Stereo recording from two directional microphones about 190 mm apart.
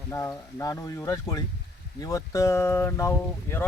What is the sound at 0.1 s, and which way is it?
Speech, 15° left (ahead or behind).